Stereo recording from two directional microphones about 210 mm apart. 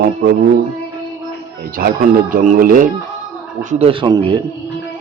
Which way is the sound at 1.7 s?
40° right (ahead or behind).